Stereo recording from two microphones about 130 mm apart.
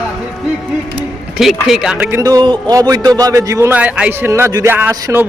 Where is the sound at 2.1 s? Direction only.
25° right (ahead or behind).